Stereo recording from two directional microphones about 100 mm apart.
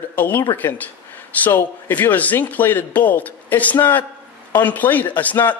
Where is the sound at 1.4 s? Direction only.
20° left (ahead or behind).